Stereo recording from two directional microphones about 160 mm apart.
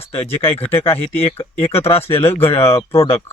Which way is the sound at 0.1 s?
35° left (ahead or behind).